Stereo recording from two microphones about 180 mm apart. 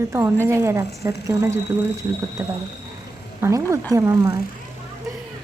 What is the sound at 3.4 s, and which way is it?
A woman's voice, 15° right (ahead or behind).